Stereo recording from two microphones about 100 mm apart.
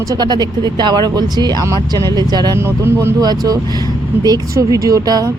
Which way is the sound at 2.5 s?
30° right (ahead or behind).